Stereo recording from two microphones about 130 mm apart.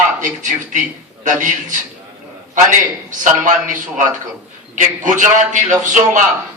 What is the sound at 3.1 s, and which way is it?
Speech, 85° right.